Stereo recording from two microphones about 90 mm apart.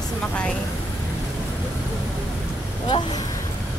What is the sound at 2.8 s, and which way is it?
Speech, 55° left (ahead or behind).